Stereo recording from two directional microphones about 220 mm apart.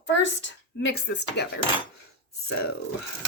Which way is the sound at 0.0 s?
55° left (ahead or behind).